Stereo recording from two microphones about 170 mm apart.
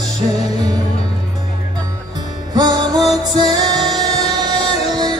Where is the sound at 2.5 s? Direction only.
25° right (ahead or behind).